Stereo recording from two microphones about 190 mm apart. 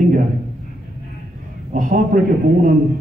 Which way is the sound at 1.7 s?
45° right (ahead or behind).